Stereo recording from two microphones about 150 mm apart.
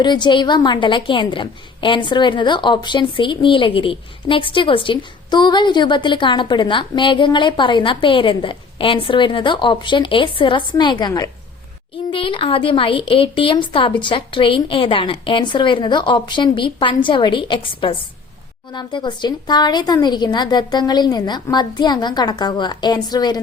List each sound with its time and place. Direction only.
0.0 s a woman's voice: 30° left (ahead or behind)